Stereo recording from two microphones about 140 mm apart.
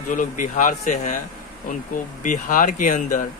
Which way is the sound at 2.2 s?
70° left (ahead or behind).